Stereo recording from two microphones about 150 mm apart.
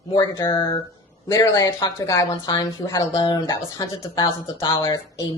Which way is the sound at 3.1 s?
30° left (ahead or behind).